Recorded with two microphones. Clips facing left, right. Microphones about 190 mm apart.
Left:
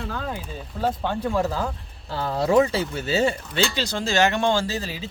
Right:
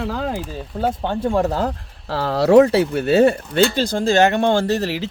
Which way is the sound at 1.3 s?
65° right (ahead or behind).